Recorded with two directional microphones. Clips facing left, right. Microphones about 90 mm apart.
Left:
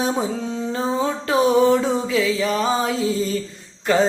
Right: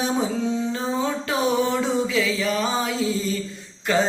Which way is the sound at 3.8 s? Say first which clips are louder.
Left 4 dB; 40° left (ahead or behind).